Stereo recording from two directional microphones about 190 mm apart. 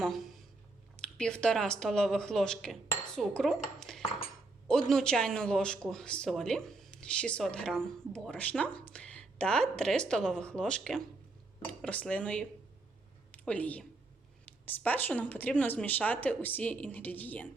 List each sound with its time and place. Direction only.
0.9 s a woman's voice: 5° left (ahead or behind)